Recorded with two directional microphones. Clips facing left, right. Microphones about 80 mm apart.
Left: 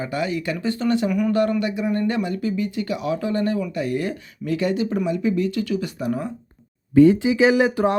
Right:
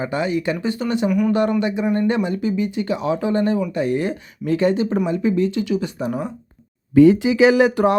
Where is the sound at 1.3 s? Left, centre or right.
Right.